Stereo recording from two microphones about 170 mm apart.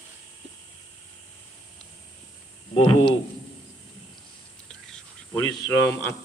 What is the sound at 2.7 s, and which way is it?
Speech, 30° left (ahead or behind).